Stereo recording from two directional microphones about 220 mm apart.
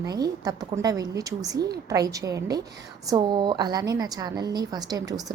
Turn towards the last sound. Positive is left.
turn(degrees=-15)  # may be behind; listen again after turning